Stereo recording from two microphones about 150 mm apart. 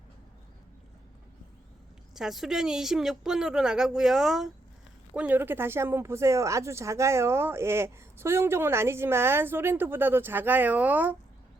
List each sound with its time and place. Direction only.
2.1 s speech: centre (ahead or behind)